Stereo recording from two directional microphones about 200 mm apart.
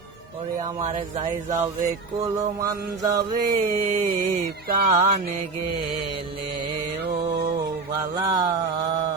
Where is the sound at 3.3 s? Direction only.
40° right (ahead or behind).